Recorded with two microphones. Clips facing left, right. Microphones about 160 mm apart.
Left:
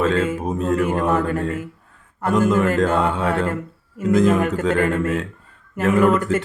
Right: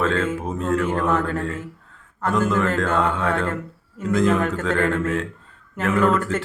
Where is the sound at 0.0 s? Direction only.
15° left (ahead or behind).